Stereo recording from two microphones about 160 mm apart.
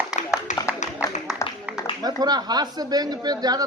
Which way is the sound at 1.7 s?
10° right (ahead or behind).